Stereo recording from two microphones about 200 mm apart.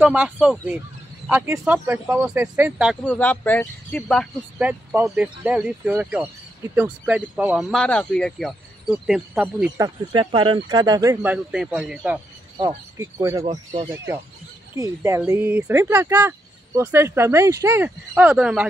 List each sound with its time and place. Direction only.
0.0 s speech: 5° right (ahead or behind)
3.1 s speech: 10° left (ahead or behind)
4.6 s speech: 10° right (ahead or behind)
9.8 s speech: 25° right (ahead or behind)
11.3 s speech: 5° right (ahead or behind)
12.5 s speech: 15° right (ahead or behind)
14.8 s speech: 15° right (ahead or behind)